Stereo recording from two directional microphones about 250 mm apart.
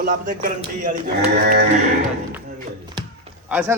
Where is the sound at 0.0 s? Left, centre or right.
Right.